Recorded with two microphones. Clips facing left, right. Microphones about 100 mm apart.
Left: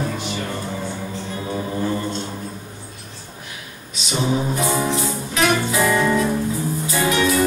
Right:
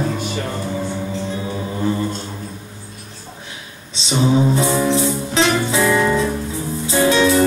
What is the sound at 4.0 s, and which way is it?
Music, 25° right (ahead or behind).